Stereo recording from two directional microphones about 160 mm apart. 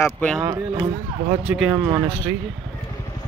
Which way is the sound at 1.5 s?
5° right (ahead or behind).